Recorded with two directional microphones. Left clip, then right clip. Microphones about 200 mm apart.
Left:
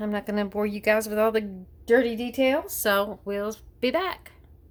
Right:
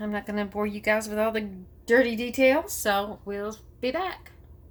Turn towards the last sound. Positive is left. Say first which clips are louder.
# left 3 dB
turn(degrees=50)  # may be behind; listen again after turning